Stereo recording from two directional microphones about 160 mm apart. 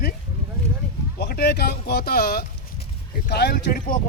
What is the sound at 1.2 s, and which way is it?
Speech, 90° left.